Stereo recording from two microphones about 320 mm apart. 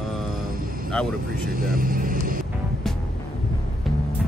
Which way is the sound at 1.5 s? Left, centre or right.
Right.